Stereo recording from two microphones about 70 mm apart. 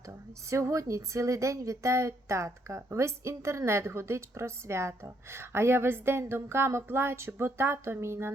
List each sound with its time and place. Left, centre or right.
0.5 s speech: right